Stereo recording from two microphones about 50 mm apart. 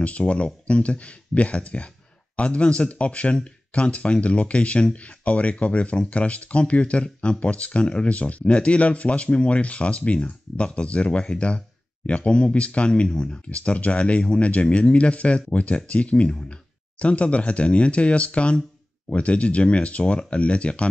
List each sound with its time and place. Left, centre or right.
0.0 s speech: left